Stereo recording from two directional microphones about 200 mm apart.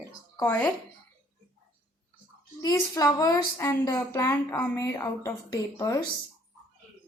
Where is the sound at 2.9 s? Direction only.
20° left (ahead or behind).